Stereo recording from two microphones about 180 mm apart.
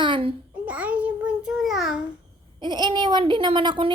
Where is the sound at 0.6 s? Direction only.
10° right (ahead or behind).